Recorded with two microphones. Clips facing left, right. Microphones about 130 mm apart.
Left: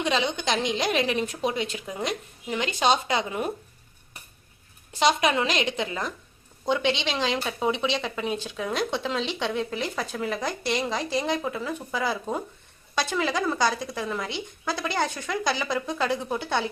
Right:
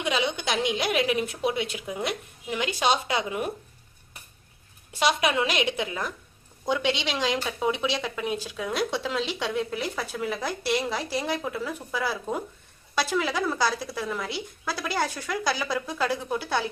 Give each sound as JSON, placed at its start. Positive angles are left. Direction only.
{"t": 0.0, "sound": "a woman's voice", "side_deg": -10}
{"t": 4.9, "sound": "a woman's voice", "side_deg": -5}